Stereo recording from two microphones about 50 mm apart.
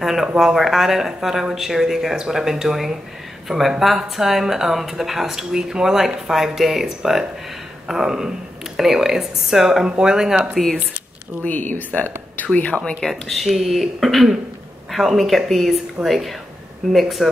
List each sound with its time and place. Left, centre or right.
0.0 s speech: centre
11.4 s speech: left
13.0 s speech: centre